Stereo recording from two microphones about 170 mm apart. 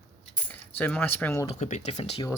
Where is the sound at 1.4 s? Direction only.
40° left (ahead or behind).